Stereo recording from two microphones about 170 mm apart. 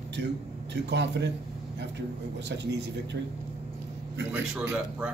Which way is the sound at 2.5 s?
85° right.